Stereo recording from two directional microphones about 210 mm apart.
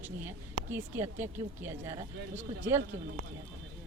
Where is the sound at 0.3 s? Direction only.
10° right (ahead or behind).